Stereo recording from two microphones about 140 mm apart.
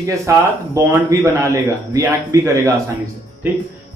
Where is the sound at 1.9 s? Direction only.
20° right (ahead or behind).